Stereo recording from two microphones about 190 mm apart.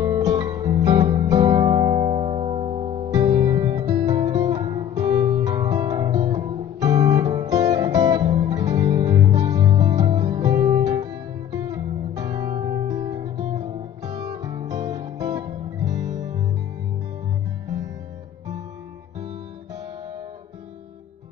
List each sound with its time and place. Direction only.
0.0 s music: 20° right (ahead or behind)
3.3 s guitar: 25° right (ahead or behind)
5.3 s music: 20° right (ahead or behind)